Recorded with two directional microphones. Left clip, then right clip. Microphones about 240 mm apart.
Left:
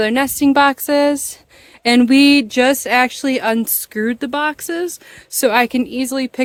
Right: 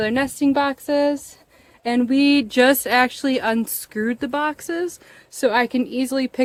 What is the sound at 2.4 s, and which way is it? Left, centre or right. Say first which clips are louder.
Speech: left 1 dB; centre.